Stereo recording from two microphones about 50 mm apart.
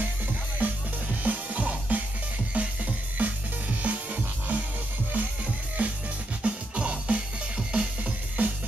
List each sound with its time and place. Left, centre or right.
0.6 s music: right